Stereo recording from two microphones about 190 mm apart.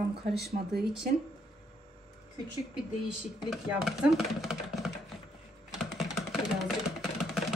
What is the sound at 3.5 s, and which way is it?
Speech, centre (ahead or behind).